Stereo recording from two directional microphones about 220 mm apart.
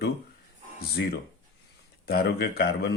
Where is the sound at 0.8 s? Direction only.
45° left (ahead or behind).